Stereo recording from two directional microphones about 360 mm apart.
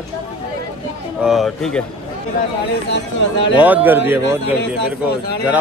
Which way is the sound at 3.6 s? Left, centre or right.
Centre.